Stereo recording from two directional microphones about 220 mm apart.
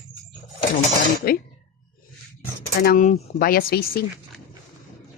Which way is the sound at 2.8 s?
40° left (ahead or behind).